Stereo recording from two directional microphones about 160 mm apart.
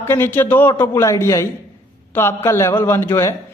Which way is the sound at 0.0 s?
15° left (ahead or behind).